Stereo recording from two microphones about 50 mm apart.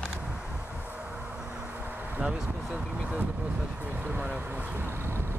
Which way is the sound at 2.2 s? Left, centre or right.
Right.